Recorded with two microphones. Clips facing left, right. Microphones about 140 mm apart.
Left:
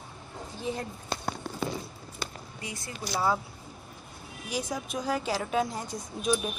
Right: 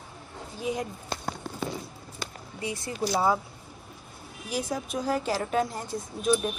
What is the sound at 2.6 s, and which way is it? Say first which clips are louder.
Speech: right 8 dB; 25° right (ahead or behind).